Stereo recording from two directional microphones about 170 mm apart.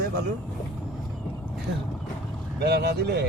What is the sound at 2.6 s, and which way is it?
Speech, 75° right (ahead or behind).